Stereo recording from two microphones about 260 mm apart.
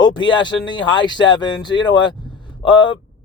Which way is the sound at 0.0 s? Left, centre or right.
Centre.